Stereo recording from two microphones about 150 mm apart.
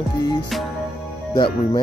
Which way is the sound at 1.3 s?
30° left (ahead or behind).